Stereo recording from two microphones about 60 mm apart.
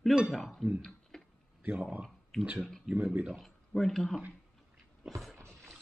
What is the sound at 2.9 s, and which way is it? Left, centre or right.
Speech, right.